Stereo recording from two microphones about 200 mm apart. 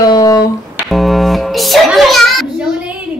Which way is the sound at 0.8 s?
Centre (ahead or behind).